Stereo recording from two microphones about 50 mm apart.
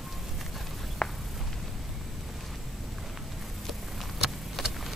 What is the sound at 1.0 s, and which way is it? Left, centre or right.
Walk, centre.